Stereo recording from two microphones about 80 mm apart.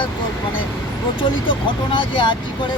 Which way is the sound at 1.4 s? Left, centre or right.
Left.